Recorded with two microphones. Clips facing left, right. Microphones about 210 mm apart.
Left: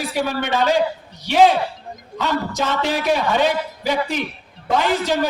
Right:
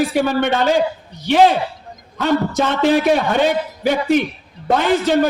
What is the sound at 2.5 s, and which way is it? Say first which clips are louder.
A man's voice: right 6 dB; 55° right (ahead or behind).